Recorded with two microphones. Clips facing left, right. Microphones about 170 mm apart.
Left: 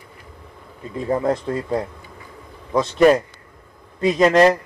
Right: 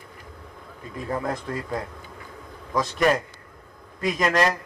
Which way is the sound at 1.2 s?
25° left (ahead or behind).